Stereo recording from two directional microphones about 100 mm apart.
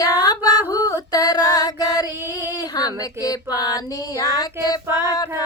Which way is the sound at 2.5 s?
40° left (ahead or behind).